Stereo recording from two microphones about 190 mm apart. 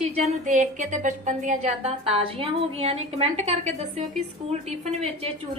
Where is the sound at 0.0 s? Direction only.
40° right (ahead or behind).